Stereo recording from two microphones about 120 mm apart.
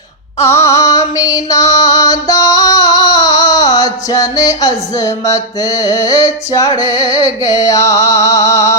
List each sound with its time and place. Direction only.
0.4 s music: 20° left (ahead or behind)
7.0 s music: 50° right (ahead or behind)
7.5 s music: 30° left (ahead or behind)